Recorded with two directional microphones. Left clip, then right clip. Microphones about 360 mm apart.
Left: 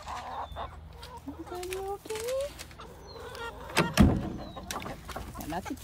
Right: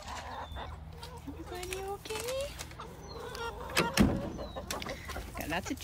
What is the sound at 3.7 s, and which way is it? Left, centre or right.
Vehicle, centre.